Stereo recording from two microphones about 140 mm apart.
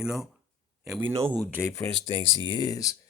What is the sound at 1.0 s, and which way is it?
Speech, 15° right (ahead or behind).